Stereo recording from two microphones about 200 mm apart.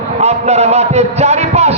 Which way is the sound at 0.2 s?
35° right (ahead or behind).